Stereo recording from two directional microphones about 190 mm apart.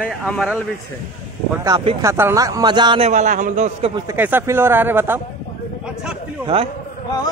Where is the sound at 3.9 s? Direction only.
10° right (ahead or behind).